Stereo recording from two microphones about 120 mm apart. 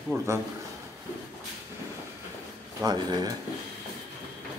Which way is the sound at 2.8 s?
30° right (ahead or behind).